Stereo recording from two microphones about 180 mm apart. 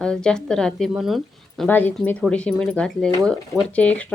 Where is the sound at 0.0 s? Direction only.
5° left (ahead or behind).